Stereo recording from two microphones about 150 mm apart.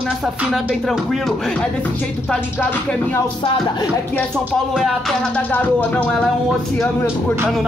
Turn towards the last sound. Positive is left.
turn(degrees=10)  # may be behind; listen again after turning